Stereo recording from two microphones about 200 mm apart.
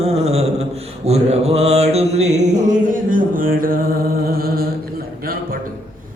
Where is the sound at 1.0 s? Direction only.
30° right (ahead or behind).